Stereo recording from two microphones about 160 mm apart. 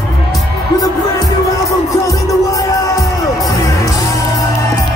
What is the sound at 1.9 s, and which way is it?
Music, 20° left (ahead or behind).